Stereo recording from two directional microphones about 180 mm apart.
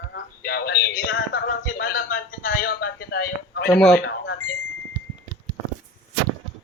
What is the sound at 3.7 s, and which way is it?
Speech, 5° left (ahead or behind).